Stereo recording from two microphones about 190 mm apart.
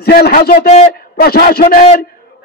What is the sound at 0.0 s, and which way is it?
Speech, 55° left (ahead or behind).